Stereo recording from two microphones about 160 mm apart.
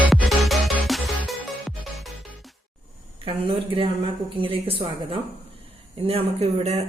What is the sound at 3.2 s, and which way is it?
A woman's voice, 35° right (ahead or behind).